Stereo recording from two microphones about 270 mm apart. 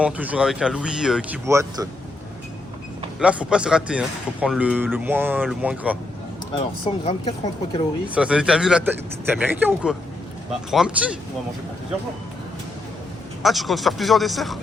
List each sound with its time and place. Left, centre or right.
0.0 s speech: centre
3.2 s speech: centre
6.8 s speech: centre
8.1 s speech: centre
13.4 s speech: centre